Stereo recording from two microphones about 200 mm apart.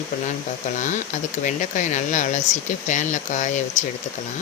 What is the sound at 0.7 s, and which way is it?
Speech, 40° left (ahead or behind).